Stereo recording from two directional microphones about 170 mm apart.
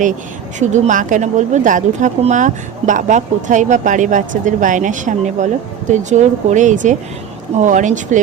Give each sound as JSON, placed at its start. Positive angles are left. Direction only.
{"t": 0.6, "sound": "speech", "side_deg": -45}